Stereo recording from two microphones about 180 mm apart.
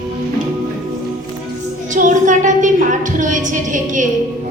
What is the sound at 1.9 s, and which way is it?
A woman's voice, 45° right (ahead or behind).